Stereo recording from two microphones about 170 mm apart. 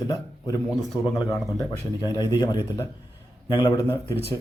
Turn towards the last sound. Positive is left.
turn(degrees=15)  # may be behind; listen again after turning